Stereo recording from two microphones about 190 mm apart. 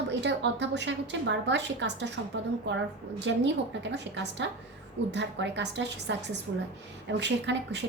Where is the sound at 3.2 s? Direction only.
65° right (ahead or behind).